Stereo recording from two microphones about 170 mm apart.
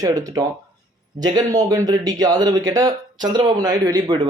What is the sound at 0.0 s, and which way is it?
Speech, 20° right (ahead or behind).